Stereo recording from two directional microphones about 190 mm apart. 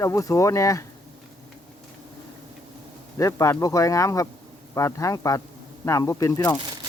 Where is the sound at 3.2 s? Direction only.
15° left (ahead or behind).